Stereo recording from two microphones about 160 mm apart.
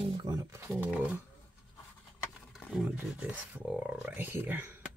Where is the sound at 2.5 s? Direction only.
Centre (ahead or behind).